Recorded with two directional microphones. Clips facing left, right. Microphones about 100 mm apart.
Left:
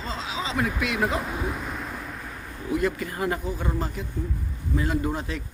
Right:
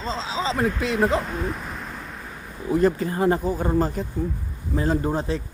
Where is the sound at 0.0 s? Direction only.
30° right (ahead or behind).